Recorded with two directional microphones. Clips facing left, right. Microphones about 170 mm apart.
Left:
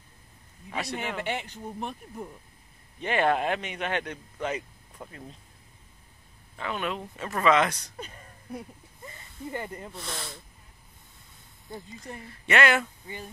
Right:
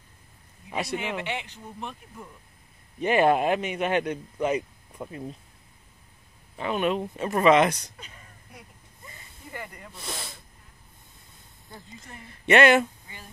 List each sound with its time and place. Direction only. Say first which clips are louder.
0.7 s speech: right 2 dB; 15° right (ahead or behind)
1.2 s speech: left 1 dB; 45° left (ahead or behind)
3.0 s speech: right 4 dB; 10° right (ahead or behind)
6.5 s speech: right 6 dB; 20° right (ahead or behind)
8.0 s a sound: left 6 dB; 40° left (ahead or behind)
9.5 s speech: left 5 dB; 30° left (ahead or behind)
9.9 s speech: even; 10° right (ahead or behind)
12.4 s speech: right 6 dB; 20° right (ahead or behind)